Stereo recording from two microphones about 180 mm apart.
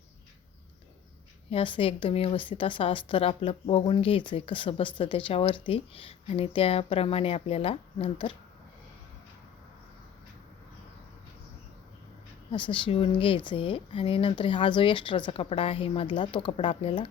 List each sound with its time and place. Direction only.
1.5 s speech: 30° left (ahead or behind)
12.5 s speech: 30° left (ahead or behind)